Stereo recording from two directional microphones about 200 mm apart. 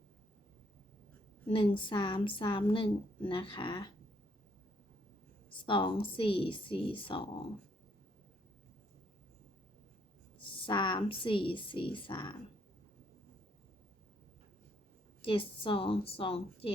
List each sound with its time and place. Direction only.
1.5 s a woman's voice: 25° left (ahead or behind)
5.5 s a woman's voice: 25° left (ahead or behind)
10.6 s a woman's voice: 20° left (ahead or behind)
15.2 s a woman's voice: 25° left (ahead or behind)